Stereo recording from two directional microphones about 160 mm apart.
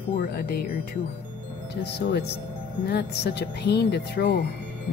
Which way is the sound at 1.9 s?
90° left.